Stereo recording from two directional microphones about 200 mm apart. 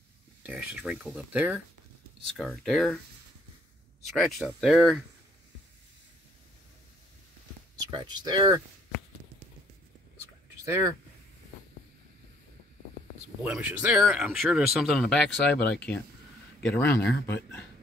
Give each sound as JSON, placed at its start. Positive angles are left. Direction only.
{"t": 0.4, "sound": "speech", "side_deg": -5}
{"t": 4.2, "sound": "speech", "side_deg": 0}
{"t": 7.8, "sound": "speech", "side_deg": -20}
{"t": 13.4, "sound": "speech", "side_deg": -5}